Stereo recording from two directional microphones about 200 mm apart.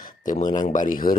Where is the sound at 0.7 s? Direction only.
40° left (ahead or behind).